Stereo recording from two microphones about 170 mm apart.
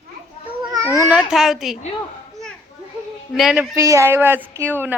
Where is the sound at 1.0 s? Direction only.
5° right (ahead or behind).